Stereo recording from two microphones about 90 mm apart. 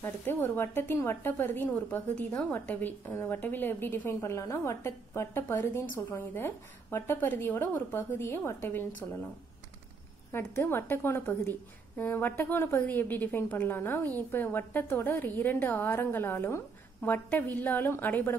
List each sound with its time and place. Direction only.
0.0 s a woman's voice: 25° left (ahead or behind)
10.3 s a woman's voice: 25° left (ahead or behind)